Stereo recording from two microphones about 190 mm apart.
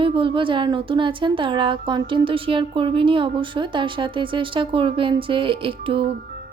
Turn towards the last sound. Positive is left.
turn(degrees=-25)  # may be behind; listen again after turning